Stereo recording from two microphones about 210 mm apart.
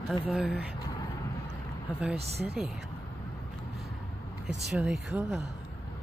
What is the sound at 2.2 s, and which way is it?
Speech, 30° right (ahead or behind).